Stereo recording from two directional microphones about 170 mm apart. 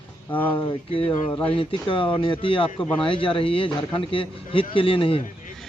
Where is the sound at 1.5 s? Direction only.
30° left (ahead or behind).